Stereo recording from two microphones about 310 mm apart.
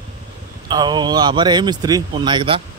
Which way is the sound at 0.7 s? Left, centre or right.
Centre.